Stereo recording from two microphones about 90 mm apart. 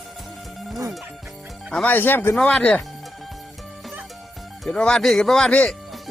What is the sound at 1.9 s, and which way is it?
Speech, 20° left (ahead or behind).